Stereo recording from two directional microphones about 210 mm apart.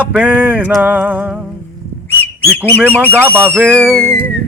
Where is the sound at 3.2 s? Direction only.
10° right (ahead or behind).